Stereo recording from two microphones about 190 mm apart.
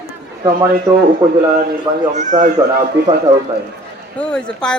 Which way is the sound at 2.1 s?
40° right (ahead or behind).